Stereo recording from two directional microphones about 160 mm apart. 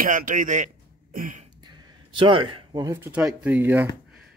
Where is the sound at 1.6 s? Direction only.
30° right (ahead or behind).